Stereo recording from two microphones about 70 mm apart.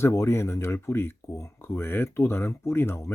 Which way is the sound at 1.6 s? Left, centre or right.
Left.